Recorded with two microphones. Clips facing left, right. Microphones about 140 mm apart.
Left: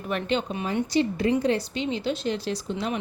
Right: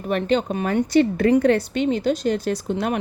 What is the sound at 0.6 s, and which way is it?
A woman's voice, 60° right (ahead or behind).